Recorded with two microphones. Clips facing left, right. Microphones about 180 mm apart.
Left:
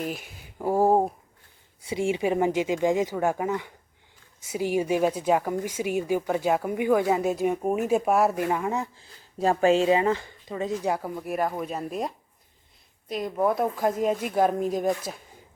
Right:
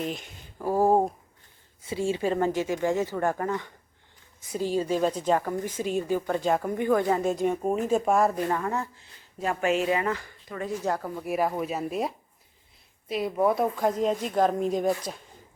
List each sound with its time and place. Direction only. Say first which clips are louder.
0.0 s speech: even; 5° left (ahead or behind)
9.0 s speech: left 6 dB; 30° left (ahead or behind)
10.9 s speech: left 1 dB; 10° left (ahead or behind)
11.2 s speech: right 1 dB; centre (ahead or behind)